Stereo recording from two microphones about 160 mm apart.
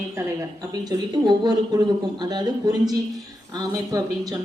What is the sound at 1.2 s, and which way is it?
Speech, 25° right (ahead or behind).